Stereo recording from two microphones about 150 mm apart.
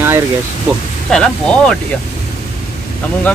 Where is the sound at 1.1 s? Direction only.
5° left (ahead or behind).